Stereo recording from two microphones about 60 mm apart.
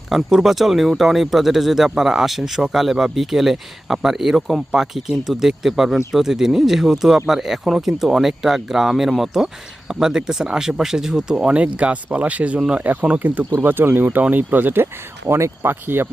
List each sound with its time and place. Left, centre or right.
0.1 s speech: centre
12.8 s speech: right
15.3 s speech: right
15.7 s speech: right